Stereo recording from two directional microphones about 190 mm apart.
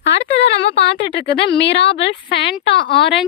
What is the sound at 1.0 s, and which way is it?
Speech, 65° left (ahead or behind).